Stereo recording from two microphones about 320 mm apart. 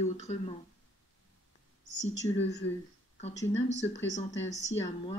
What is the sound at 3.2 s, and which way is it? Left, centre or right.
Speech, centre.